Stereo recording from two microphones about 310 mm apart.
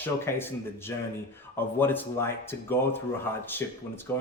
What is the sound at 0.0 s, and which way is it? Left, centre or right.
Speech, centre.